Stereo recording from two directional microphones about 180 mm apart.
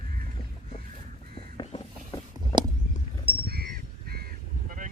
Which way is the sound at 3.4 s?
60° right (ahead or behind).